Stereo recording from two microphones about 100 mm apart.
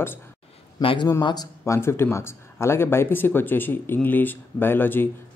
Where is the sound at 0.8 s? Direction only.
60° left (ahead or behind).